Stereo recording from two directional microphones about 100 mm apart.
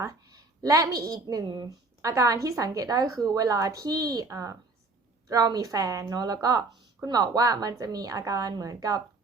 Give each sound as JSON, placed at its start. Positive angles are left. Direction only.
{"t": 0.0, "sound": "a woman's voice", "side_deg": -35}